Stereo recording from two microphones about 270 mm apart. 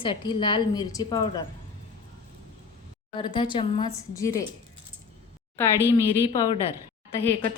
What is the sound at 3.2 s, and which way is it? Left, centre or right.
A woman's voice, centre.